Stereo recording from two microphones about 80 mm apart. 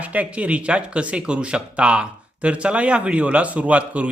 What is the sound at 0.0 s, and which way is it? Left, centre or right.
A man's voice, centre.